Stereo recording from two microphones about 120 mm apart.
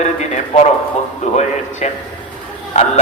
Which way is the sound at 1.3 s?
70° left (ahead or behind).